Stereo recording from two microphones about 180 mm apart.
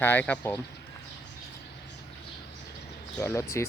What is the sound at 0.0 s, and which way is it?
Speech, 10° left (ahead or behind).